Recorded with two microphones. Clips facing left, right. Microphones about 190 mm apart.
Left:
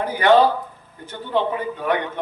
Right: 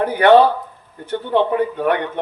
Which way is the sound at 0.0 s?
60° right (ahead or behind).